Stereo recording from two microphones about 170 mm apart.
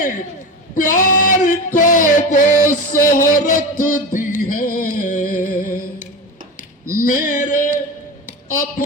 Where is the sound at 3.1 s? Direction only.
55° left (ahead or behind).